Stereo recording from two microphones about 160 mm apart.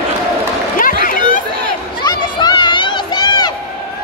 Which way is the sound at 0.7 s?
60° left (ahead or behind).